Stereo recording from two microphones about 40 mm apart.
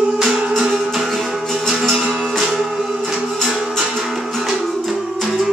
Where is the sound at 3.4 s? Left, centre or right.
Centre.